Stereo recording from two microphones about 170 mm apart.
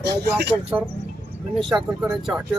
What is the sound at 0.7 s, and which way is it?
Speech, 10° right (ahead or behind).